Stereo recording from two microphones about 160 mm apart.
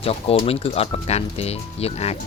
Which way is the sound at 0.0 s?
35° left (ahead or behind).